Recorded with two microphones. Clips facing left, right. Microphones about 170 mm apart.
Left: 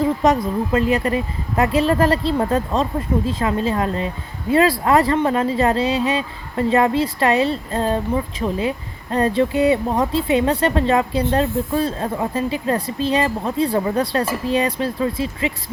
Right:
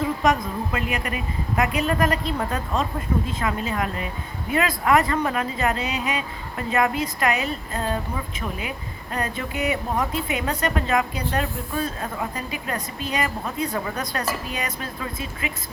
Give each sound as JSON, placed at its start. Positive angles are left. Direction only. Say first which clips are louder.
{"t": 0.0, "sound": "speech", "louder": "left 5 dB", "side_deg": 30}